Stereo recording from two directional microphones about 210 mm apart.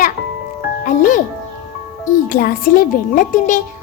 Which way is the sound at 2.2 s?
45° left (ahead or behind).